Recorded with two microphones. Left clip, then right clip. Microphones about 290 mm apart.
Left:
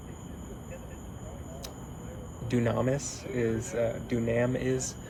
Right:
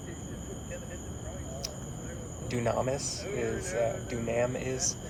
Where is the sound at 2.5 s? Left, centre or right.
Left.